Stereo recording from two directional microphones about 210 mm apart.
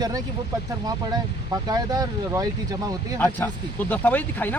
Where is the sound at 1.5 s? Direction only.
20° right (ahead or behind).